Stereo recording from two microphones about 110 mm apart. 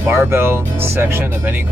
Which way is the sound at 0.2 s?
20° right (ahead or behind).